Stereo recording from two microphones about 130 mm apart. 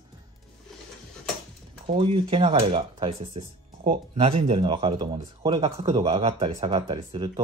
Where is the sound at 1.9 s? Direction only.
50° right (ahead or behind).